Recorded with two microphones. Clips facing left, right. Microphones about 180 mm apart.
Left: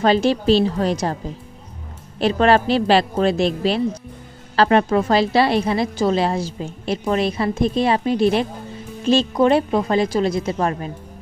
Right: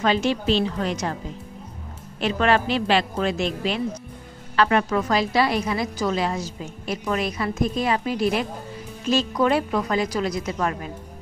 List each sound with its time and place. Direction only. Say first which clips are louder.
0.0 s a woman's voice: left 5 dB; 35° left (ahead or behind)
2.1 s a woman's voice: left 5 dB; 35° left (ahead or behind)